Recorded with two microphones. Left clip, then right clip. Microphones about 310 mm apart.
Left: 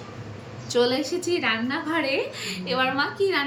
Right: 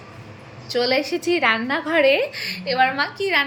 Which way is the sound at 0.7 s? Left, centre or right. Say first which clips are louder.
Right 2 dB; centre.